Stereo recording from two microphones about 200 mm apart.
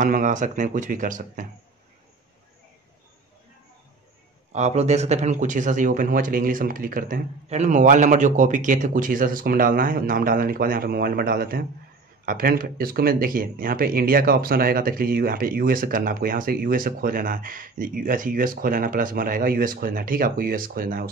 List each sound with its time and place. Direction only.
0.0 s speech: 40° right (ahead or behind)
4.5 s speech: 35° right (ahead or behind)